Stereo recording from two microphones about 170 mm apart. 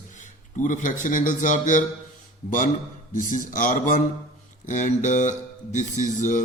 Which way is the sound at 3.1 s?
50° left (ahead or behind).